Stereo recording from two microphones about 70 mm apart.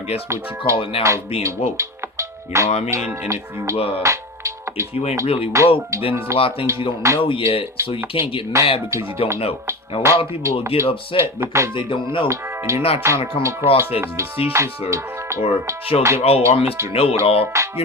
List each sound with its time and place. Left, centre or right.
0.3 s speech: right